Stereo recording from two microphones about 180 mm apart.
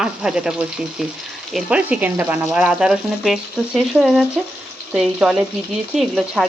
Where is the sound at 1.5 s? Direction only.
5° right (ahead or behind).